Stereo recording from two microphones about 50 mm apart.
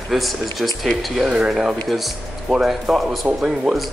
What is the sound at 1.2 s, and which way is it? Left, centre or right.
Speech, centre.